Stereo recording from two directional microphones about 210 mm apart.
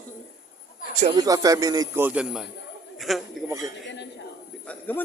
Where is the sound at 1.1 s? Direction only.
15° right (ahead or behind); by 3.2 s centre (ahead or behind).